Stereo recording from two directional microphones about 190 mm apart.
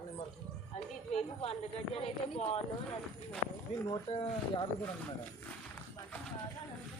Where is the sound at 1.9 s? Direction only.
30° left (ahead or behind).